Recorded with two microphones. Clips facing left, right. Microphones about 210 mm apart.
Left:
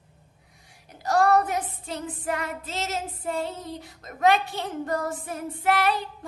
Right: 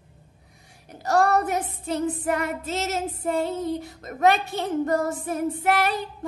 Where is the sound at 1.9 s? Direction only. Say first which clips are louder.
Right 7 dB; 45° right (ahead or behind).